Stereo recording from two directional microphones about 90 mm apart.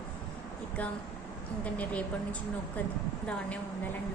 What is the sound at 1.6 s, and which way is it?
Speech, 15° left (ahead or behind).